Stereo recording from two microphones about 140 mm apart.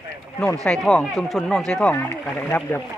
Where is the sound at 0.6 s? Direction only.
5° left (ahead or behind).